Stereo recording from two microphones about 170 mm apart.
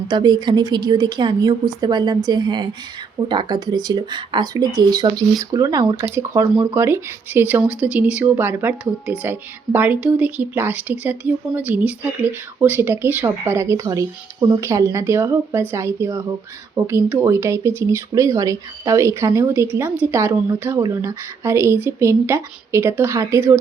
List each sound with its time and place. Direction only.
0.1 s a woman's voice: 25° right (ahead or behind)